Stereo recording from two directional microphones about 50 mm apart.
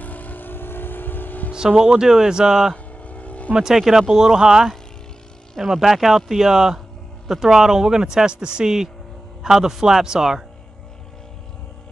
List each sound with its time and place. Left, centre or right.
0.0 s vehicle: left
1.5 s a man's voice: centre
3.0 s vehicle: left
3.5 s a man's voice: centre